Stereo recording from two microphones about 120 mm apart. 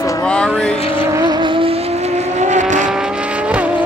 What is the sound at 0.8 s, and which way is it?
Vehicle, 50° left (ahead or behind).